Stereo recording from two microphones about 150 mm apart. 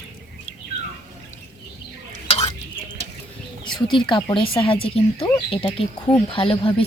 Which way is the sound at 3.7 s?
30° left (ahead or behind).